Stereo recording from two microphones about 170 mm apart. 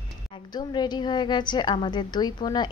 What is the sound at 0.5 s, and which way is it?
Speech, 25° left (ahead or behind).